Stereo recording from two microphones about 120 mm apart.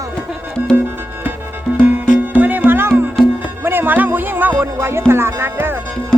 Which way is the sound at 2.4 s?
15° right (ahead or behind).